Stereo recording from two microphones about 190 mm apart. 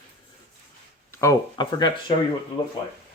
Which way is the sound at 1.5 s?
20° left (ahead or behind).